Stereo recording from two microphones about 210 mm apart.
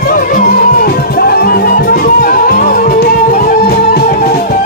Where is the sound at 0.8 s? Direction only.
45° left (ahead or behind).